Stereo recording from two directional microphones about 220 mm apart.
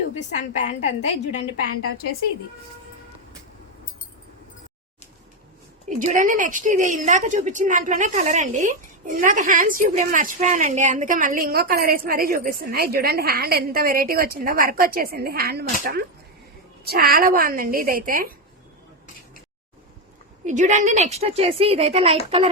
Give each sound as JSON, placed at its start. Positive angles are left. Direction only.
{"t": 0.2, "sound": "a woman's voice", "side_deg": 35}
{"t": 6.0, "sound": "a woman's voice", "side_deg": -35}
{"t": 20.4, "sound": "a woman's voice", "side_deg": -35}